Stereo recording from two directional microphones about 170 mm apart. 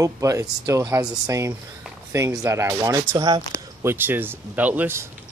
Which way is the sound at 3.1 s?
30° right (ahead or behind).